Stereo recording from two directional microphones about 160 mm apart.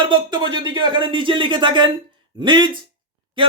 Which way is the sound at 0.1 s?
30° right (ahead or behind).